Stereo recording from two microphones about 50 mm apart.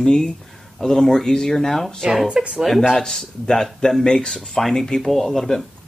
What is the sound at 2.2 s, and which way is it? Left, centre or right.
Speech, right.